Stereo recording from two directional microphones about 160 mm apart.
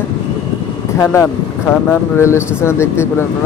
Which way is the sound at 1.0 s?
15° left (ahead or behind).